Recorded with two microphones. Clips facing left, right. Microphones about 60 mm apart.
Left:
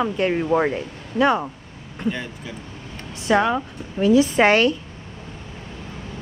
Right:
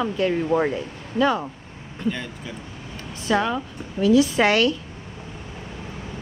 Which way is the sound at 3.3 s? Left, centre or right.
Left.